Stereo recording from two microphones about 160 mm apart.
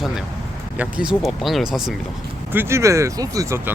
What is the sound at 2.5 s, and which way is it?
Speech, 15° right (ahead or behind).